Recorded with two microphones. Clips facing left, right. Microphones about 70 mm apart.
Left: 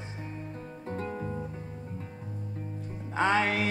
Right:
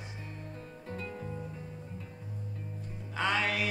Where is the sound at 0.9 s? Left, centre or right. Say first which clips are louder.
Left 6 dB; left.